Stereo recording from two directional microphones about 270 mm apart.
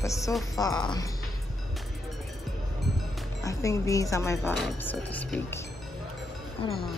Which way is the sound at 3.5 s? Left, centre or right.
Centre.